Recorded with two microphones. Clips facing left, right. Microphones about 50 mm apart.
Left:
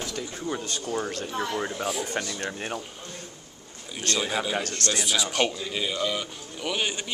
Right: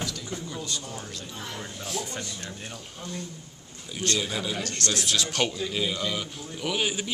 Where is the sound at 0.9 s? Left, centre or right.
Left.